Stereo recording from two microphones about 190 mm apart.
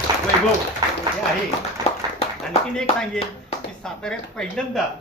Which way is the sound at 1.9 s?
35° left (ahead or behind).